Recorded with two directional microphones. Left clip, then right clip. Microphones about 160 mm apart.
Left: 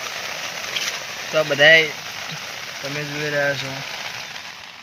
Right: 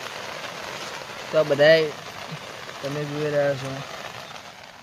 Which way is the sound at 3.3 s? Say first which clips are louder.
Left 1 dB; 15° right (ahead or behind).